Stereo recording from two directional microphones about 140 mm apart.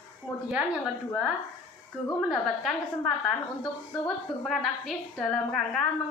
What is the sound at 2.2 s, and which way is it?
A woman's voice, centre (ahead or behind).